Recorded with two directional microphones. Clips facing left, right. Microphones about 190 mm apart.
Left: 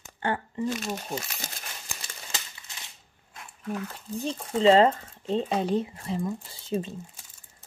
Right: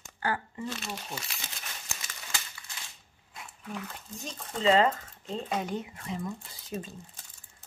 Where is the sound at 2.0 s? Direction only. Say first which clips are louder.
Left 1 dB; 20° left (ahead or behind).